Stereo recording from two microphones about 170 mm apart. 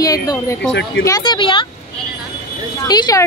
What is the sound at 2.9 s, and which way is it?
Speech, 25° left (ahead or behind).